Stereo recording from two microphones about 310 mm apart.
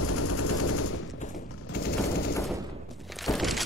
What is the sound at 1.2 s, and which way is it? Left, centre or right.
Machine gun, left.